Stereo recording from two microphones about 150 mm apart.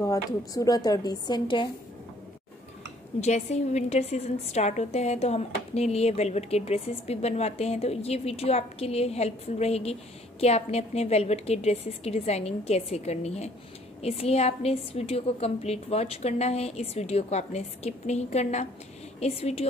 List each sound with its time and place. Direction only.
0.0 s speech: 25° left (ahead or behind)
3.2 s a woman's voice: 45° left (ahead or behind)